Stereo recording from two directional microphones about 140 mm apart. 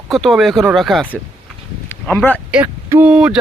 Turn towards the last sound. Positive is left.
turn(degrees=-5)  # may be behind; listen again after turning